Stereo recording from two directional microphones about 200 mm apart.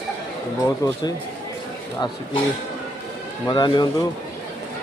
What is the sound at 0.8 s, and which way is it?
Speech, 15° left (ahead or behind).